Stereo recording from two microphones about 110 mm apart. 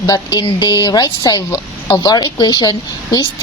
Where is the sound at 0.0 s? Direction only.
35° left (ahead or behind).